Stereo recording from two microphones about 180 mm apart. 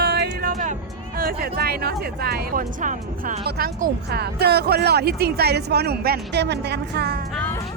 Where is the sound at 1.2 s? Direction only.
55° right (ahead or behind).